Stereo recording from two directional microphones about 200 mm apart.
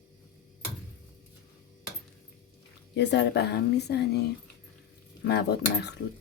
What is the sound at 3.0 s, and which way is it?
Speech, 60° left (ahead or behind).